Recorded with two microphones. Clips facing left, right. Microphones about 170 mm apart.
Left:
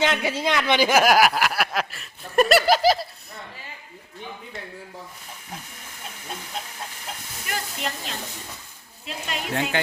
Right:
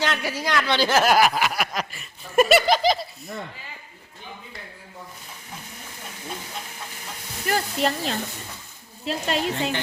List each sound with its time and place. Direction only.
0.0 s speech: 20° left (ahead or behind); by 3.3 s 5° left (ahead or behind)
7.4 s speech: 35° right (ahead or behind)